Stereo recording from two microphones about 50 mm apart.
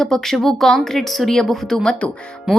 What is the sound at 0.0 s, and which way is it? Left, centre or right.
A woman's voice, centre.